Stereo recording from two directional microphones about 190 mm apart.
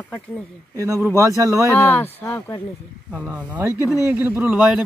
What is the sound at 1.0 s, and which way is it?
Speech, 15° right (ahead or behind).